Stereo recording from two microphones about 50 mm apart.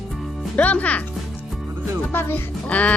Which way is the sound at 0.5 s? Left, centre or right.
Left.